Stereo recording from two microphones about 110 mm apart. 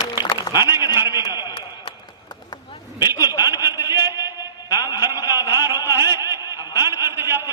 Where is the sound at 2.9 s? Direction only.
20° right (ahead or behind).